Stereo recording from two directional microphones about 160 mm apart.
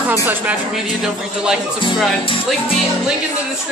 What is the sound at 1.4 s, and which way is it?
Speech, 5° right (ahead or behind).